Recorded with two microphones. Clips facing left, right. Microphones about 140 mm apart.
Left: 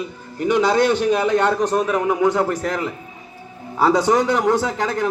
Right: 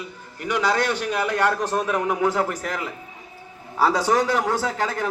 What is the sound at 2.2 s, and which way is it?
Speech, 5° right (ahead or behind).